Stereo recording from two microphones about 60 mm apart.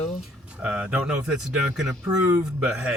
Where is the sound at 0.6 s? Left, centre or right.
Right.